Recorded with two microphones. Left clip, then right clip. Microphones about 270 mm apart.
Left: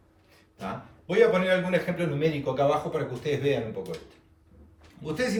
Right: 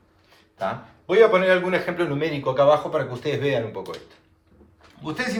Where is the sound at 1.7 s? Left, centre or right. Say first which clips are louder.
Right 4 dB; centre.